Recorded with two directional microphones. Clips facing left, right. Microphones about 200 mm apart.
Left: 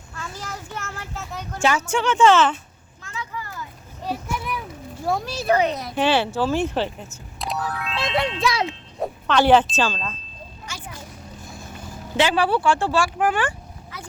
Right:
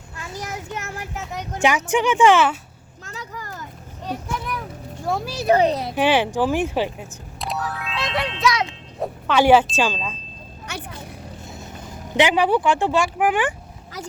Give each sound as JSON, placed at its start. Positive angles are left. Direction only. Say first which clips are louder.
{"t": 0.2, "sound": "a child's voice", "louder": "right 3 dB", "side_deg": -20}
{"t": 3.0, "sound": "a sound", "louder": "left 1 dB", "side_deg": -40}
{"t": 4.0, "sound": "vehicle", "louder": "even", "side_deg": 10}
{"t": 5.0, "sound": "speech", "louder": "even", "side_deg": 0}
{"t": 5.5, "sound": "speech", "louder": "right 3 dB", "side_deg": -30}
{"t": 6.0, "sound": "speech", "louder": "right 1 dB", "side_deg": -10}
{"t": 7.3, "sound": "music", "louder": "even", "side_deg": 0}
{"t": 8.0, "sound": "a child's voice", "louder": "even", "side_deg": 25}
{"t": 9.0, "sound": "speech", "louder": "right 1 dB", "side_deg": -10}
{"t": 10.7, "sound": "vehicle", "louder": "right 5 dB", "side_deg": -60}
{"t": 11.4, "sound": "speech", "louder": "right 1 dB", "side_deg": -20}
{"t": 13.9, "sound": "a sound", "louder": "right 6 dB", "side_deg": -40}